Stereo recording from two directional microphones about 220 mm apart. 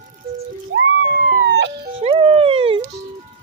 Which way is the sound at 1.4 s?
55° right (ahead or behind).